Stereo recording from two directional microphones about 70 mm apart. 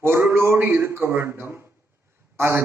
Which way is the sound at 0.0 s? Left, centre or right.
Right.